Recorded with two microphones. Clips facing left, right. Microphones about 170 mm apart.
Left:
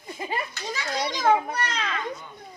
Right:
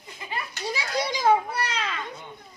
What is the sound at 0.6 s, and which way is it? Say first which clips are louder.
Children playing: right 5 dB; 10° right (ahead or behind).